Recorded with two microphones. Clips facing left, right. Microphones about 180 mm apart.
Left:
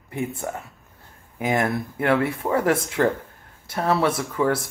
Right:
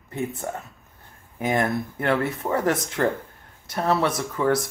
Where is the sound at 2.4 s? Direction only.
10° left (ahead or behind).